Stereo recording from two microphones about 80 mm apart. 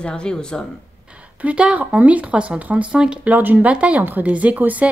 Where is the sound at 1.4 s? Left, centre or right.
Centre.